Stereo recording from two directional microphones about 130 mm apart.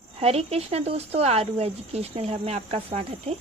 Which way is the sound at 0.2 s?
50° right (ahead or behind).